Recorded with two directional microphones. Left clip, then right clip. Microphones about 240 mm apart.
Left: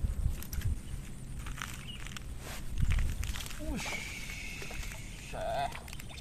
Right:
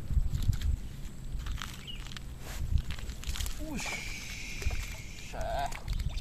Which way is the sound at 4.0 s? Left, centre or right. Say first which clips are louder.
Right 1 dB; centre.